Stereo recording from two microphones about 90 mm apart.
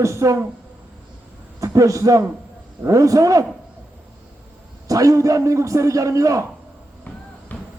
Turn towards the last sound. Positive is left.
turn(degrees=15)  # may be behind; listen again after turning